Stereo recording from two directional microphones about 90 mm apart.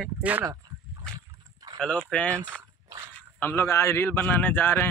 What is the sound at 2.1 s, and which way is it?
Speech, 10° left (ahead or behind).